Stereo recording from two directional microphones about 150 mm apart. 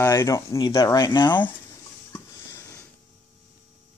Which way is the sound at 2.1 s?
20° left (ahead or behind).